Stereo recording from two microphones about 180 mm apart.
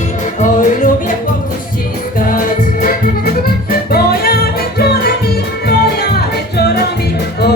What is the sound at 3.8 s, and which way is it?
Music, 60° left (ahead or behind).